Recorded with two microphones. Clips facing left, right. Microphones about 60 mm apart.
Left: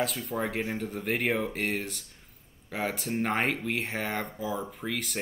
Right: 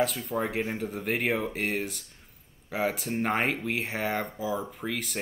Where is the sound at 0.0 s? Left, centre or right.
Centre.